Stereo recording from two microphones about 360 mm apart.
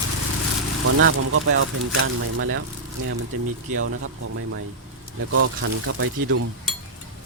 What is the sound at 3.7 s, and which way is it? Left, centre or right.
Speech, right.